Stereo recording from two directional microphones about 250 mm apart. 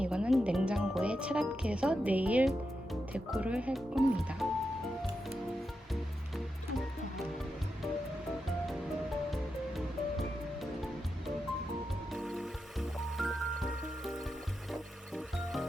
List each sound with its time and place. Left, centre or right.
0.0 s music: centre
3.1 s speech: centre
12.1 s music: centre